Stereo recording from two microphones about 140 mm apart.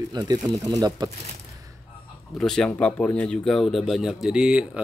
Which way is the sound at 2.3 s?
5° left (ahead or behind).